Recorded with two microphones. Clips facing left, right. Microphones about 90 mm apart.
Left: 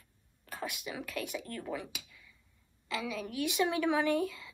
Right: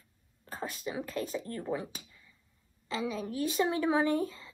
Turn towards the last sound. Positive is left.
turn(degrees=-35)  # may be behind; listen again after turning